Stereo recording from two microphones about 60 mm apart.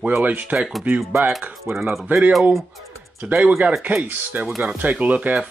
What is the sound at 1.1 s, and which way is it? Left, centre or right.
Speech, right.